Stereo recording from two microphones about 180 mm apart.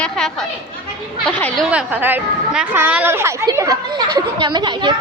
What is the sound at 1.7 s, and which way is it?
A woman's voice, 10° right (ahead or behind).